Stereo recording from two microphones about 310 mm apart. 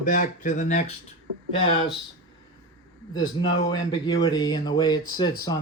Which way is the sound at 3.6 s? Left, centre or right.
Centre.